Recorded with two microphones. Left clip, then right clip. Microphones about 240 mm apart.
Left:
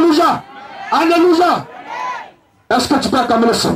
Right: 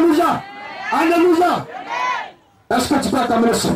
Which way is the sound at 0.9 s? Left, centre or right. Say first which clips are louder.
Left 3 dB; left.